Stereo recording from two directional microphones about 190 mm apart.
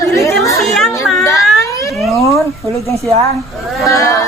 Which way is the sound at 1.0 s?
Centre (ahead or behind).